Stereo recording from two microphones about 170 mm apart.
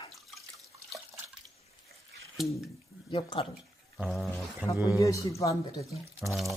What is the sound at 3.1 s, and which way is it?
Speech, 30° left (ahead or behind).